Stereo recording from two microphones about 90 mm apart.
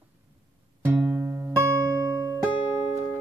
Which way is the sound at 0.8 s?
25° right (ahead or behind).